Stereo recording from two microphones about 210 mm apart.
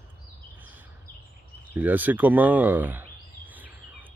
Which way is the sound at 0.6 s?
10° right (ahead or behind).